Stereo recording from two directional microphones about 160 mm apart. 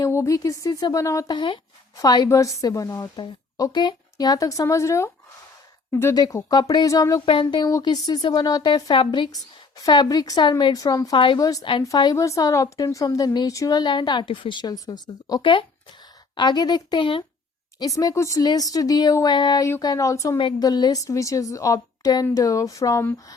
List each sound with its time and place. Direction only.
0.0 s a woman's voice: 20° left (ahead or behind)